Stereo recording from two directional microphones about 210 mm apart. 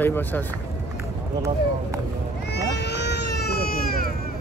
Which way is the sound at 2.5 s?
55° left (ahead or behind).